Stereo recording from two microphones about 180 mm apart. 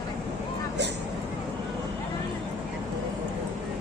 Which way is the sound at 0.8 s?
70° right (ahead or behind).